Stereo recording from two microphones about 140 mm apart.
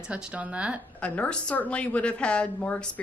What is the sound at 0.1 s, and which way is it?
Speech, 10° right (ahead or behind).